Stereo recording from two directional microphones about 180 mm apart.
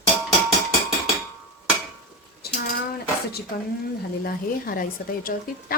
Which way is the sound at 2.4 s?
60° left (ahead or behind).